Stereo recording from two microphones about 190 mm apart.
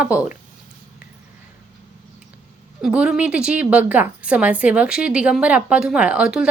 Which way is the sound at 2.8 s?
5° right (ahead or behind).